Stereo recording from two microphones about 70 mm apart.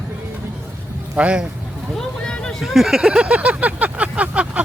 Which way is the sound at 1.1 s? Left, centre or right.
Centre.